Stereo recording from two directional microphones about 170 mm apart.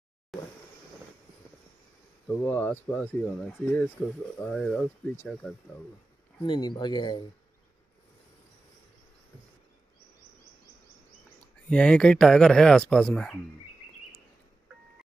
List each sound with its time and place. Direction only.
0.3 s a sound: centre (ahead or behind)
2.2 s speech: 10° left (ahead or behind)
6.4 s speech: 25° left (ahead or behind)
11.7 s speech: 5° left (ahead or behind)